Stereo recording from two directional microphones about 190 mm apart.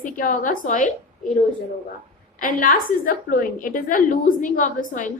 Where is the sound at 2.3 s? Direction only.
45° left (ahead or behind).